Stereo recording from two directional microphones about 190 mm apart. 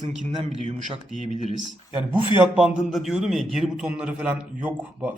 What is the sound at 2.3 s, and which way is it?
A man's voice, 5° right (ahead or behind).